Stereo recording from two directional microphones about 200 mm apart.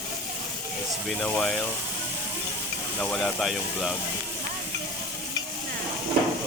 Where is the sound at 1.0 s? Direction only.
5° left (ahead or behind).